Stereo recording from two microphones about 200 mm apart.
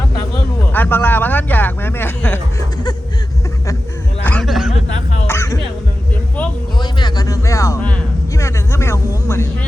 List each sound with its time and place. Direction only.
0.7 s speech: 10° left (ahead or behind)
4.2 s a sound: 5° left (ahead or behind)
5.2 s music: 15° left (ahead or behind)
6.7 s music: 20° left (ahead or behind)